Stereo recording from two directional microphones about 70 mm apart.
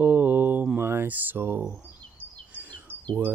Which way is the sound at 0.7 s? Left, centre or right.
Right.